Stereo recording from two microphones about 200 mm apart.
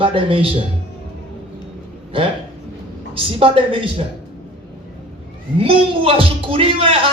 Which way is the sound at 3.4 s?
25° right (ahead or behind).